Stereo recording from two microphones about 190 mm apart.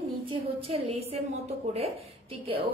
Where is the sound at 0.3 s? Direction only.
30° right (ahead or behind).